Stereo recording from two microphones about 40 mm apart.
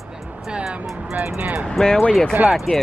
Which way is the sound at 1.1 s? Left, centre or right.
Right.